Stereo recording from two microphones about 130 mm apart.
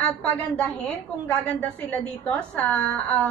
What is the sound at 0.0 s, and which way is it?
A woman's voice, 10° left (ahead or behind).